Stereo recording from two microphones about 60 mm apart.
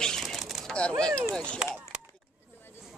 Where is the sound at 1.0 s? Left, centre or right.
Centre.